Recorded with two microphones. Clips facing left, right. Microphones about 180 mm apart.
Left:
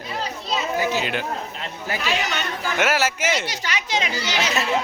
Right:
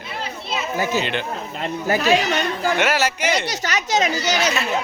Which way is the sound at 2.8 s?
5° left (ahead or behind).